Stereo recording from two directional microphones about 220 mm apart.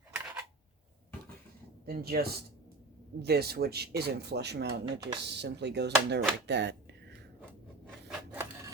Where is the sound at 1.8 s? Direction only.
45° right (ahead or behind).